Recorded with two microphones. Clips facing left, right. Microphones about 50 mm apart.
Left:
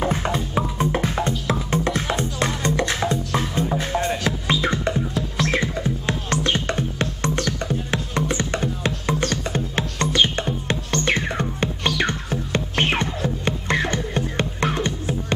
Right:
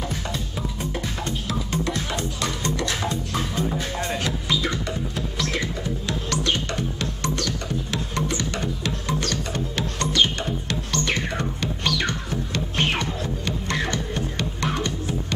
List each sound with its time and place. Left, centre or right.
0.0 s music: left
4.2 s music: left